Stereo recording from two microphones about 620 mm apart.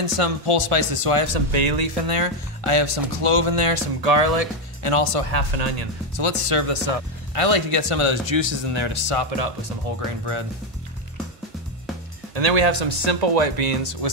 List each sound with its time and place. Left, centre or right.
0.0 s speech: right
1.5 s speech: right
6.1 s speech: right
12.4 s speech: right